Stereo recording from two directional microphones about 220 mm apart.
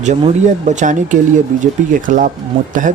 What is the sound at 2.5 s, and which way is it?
Speech, 25° right (ahead or behind).